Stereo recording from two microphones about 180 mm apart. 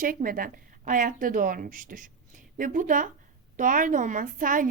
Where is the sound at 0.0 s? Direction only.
50° right (ahead or behind).